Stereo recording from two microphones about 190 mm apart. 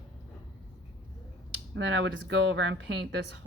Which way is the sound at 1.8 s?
70° right (ahead or behind).